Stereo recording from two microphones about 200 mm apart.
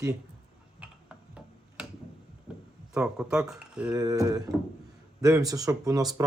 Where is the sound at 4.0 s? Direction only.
20° right (ahead or behind).